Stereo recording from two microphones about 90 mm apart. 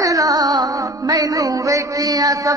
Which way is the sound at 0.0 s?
40° right (ahead or behind).